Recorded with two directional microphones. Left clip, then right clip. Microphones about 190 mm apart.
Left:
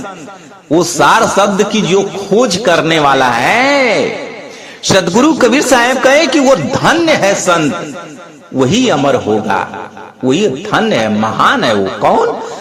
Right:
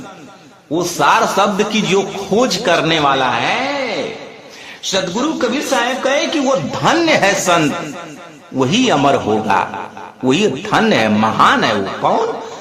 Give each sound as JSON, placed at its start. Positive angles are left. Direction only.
{"t": 0.7, "sound": "a man's voice", "side_deg": 30}